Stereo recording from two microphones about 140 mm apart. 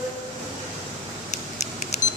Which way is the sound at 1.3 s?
55° left (ahead or behind).